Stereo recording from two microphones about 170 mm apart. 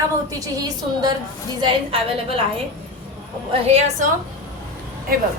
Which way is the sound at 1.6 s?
35° right (ahead or behind).